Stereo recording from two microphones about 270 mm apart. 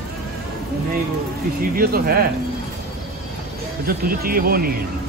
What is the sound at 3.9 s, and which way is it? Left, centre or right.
Speech, right.